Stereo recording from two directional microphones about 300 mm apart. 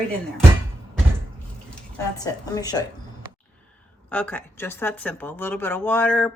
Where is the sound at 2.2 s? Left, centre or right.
Centre.